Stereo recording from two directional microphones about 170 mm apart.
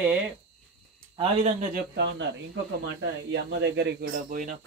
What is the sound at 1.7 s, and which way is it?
Speech, 75° right (ahead or behind).